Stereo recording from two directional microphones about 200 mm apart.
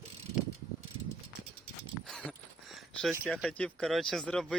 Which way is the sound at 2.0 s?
5° left (ahead or behind).